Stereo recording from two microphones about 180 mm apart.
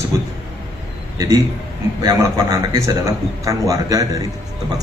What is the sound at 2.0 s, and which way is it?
A man's voice, 20° right (ahead or behind).